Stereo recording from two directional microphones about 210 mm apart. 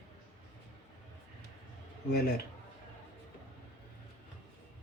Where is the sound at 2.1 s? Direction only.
50° left (ahead or behind).